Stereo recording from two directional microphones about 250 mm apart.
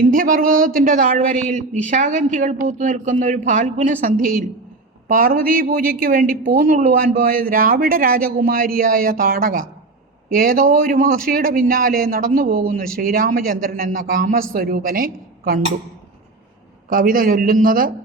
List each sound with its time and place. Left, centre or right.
0.1 s a woman's voice: right
5.0 s a woman's voice: right
16.9 s a woman's voice: right